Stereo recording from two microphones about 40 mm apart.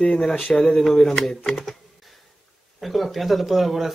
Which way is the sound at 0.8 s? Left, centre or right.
Centre.